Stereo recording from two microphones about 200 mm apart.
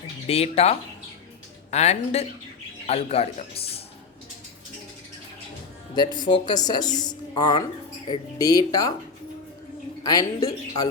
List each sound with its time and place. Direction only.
0.3 s speech: 30° left (ahead or behind)
5.9 s speech: 20° left (ahead or behind)
10.0 s speech: 20° left (ahead or behind)